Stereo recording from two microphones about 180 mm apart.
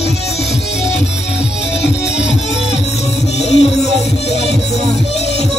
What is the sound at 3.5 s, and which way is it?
Music, 35° left (ahead or behind).